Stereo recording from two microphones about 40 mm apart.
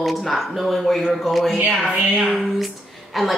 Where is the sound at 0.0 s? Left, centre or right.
Centre.